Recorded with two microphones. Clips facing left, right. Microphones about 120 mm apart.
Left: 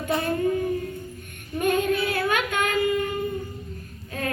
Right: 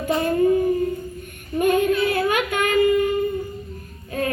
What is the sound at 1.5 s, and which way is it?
Female singing, 10° right (ahead or behind).